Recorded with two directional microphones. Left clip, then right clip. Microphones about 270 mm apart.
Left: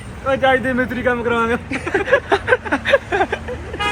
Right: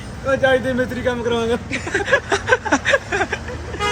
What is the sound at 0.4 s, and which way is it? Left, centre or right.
Speech, left.